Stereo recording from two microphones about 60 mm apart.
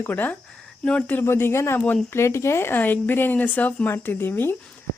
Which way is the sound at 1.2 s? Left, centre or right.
Left.